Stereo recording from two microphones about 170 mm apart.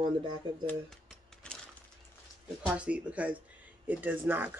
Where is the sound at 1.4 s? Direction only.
5° left (ahead or behind).